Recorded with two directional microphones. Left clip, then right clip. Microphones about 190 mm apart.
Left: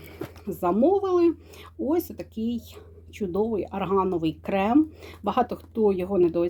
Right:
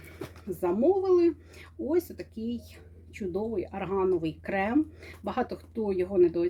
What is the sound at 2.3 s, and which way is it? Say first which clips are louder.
Speech: left 6 dB; centre (ahead or behind).